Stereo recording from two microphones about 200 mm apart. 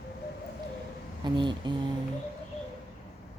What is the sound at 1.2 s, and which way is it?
Mantra, 20° right (ahead or behind).